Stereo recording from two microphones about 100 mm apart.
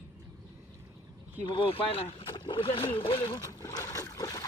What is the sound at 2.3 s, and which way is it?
Speech, 55° left (ahead or behind).